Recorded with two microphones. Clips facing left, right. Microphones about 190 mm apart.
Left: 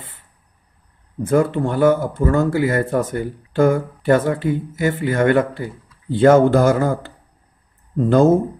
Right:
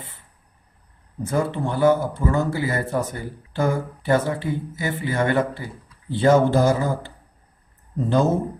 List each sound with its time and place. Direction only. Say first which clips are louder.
1.3 s speech: left 6 dB; 55° left (ahead or behind)
8.1 s speech: left 7 dB; 55° left (ahead or behind)